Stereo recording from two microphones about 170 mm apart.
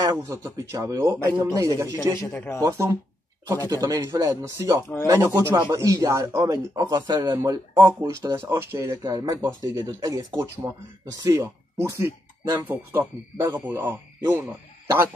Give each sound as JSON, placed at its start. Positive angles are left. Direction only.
{"t": 0.0, "sound": "speech", "side_deg": -20}
{"t": 2.1, "sound": "speech", "side_deg": 10}
{"t": 2.6, "sound": "speech", "side_deg": -15}